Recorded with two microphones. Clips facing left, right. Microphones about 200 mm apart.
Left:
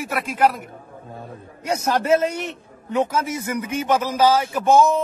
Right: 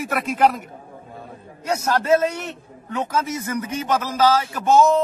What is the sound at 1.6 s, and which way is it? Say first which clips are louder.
A man's voice: even; 15° left (ahead or behind).